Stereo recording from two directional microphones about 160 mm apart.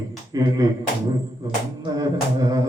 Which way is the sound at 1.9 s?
25° right (ahead or behind).